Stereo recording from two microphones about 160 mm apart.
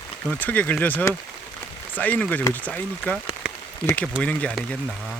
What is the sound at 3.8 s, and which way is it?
Speech, 10° left (ahead or behind).